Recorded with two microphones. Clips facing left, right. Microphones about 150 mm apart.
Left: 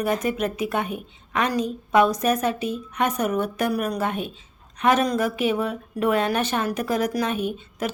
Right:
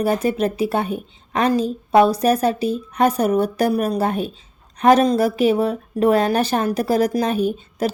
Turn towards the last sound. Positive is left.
turn(degrees=-35)  # may be behind; listen again after turning